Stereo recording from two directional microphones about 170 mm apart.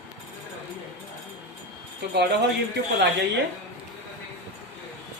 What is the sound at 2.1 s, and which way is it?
Speech, 80° right.